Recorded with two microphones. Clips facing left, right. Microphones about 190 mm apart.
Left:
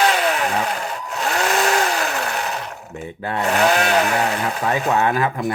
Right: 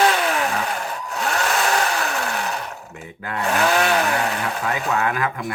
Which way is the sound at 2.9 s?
30° left (ahead or behind).